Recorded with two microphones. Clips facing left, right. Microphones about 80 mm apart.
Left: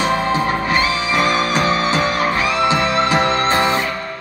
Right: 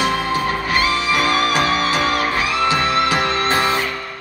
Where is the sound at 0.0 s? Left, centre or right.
Left.